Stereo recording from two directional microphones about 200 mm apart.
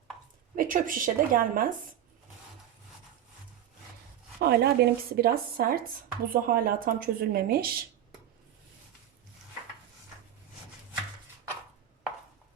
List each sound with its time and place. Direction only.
0.5 s speech: 45° right (ahead or behind)
4.4 s speech: 55° right (ahead or behind)